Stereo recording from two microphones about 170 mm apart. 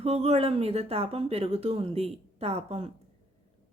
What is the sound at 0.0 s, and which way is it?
Speech, 35° right (ahead or behind).